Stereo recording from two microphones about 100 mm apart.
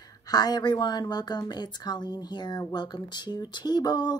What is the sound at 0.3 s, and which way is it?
Speech, 40° left (ahead or behind).